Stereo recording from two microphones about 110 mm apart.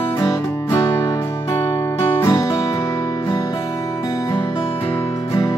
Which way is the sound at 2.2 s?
35° left (ahead or behind).